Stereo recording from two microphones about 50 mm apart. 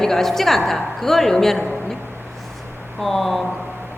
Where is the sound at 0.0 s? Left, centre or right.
Centre.